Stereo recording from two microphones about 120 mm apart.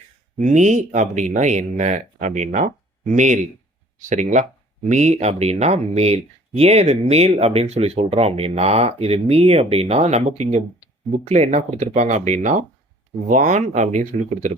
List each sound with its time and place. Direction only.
0.3 s speech: 85° right
4.9 s speech: 65° right (ahead or behind); by 14.5 s 80° right